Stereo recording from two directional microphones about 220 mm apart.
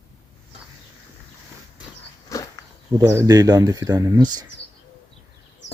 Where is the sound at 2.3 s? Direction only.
15° left (ahead or behind).